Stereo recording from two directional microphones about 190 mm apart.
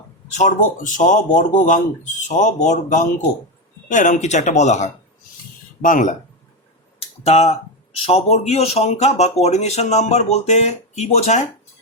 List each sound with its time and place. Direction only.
0.3 s speech: 40° left (ahead or behind)
7.3 s speech: 35° left (ahead or behind)